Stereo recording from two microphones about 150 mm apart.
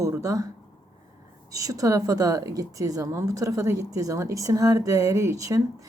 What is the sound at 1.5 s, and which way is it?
Speech, 20° right (ahead or behind).